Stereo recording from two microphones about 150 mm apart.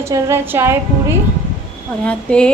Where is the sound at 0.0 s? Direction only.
15° right (ahead or behind).